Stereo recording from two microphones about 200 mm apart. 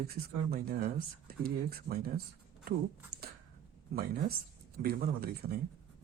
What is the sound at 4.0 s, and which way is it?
Speech, 50° right (ahead or behind).